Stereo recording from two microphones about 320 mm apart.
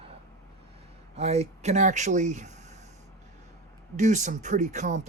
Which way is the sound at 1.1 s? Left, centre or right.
Centre.